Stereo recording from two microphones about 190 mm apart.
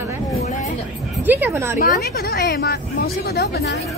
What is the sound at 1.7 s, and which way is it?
Speech, 50° left (ahead or behind).